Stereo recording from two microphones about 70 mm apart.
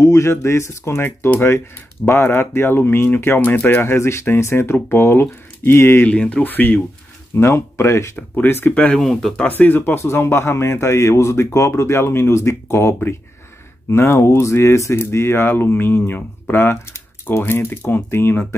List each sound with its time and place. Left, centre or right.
0.0 s a man's voice: left
6.0 s speech: centre
7.3 s speech: left
8.2 s a man's voice: left
8.9 s speech: centre
9.5 s a man's voice: left